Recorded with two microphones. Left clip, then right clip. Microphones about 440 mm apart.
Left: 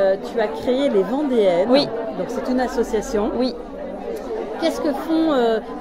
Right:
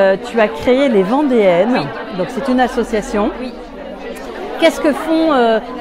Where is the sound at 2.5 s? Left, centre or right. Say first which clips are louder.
Right 6 dB; centre.